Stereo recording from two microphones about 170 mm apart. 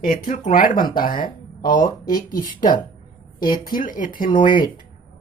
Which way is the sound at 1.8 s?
25° left (ahead or behind).